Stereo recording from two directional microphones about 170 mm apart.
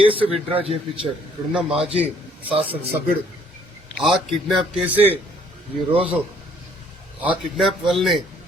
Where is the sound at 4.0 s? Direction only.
Centre (ahead or behind).